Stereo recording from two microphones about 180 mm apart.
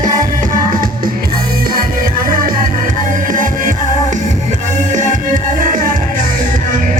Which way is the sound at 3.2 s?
50° right (ahead or behind).